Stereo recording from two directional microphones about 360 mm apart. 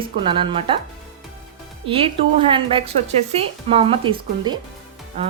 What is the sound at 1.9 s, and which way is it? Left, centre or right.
Speech, centre.